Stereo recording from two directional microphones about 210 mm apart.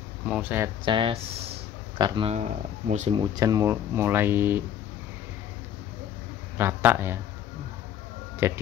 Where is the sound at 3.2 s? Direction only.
15° right (ahead or behind).